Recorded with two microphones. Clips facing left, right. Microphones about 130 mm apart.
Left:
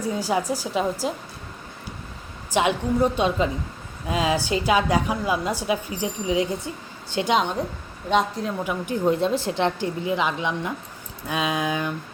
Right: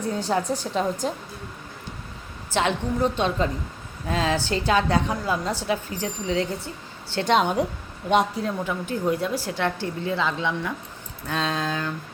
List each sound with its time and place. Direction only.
0.0 s a woman's voice: 10° left (ahead or behind)
2.5 s a woman's voice: 15° left (ahead or behind)
7.3 s a woman's voice: 10° right (ahead or behind)
8.5 s a woman's voice: 15° left (ahead or behind)
9.0 s a woman's voice: 25° left (ahead or behind)